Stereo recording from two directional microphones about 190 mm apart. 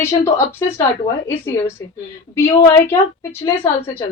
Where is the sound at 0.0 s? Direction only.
15° left (ahead or behind).